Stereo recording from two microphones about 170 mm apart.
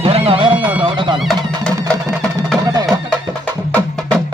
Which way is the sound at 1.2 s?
Centre (ahead or behind).